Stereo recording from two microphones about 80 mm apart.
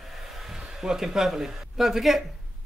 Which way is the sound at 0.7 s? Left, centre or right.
Centre.